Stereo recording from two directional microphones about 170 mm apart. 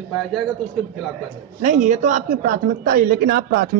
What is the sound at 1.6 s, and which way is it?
A woman's voice, 50° right (ahead or behind).